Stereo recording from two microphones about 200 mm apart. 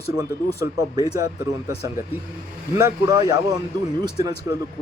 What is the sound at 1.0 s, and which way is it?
Speech, 20° right (ahead or behind).